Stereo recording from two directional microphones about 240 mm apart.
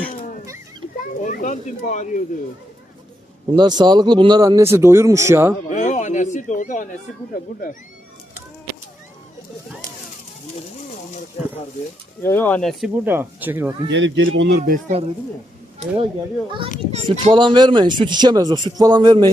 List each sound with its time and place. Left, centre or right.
0.0 s a sound: left
1.2 s speech: left
3.5 s speech: centre
5.7 s speech: left
12.2 s speech: centre
13.1 s speech: centre
13.9 s speech: right
14.6 s speech: right
16.9 s speech: right